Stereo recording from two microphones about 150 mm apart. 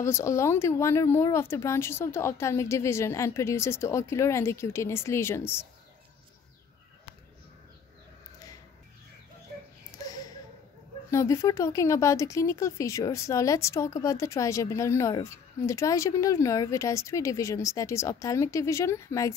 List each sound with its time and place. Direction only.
0.0 s speech: 20° left (ahead or behind)
9.9 s a sound: 25° left (ahead or behind)
11.1 s speech: 20° left (ahead or behind)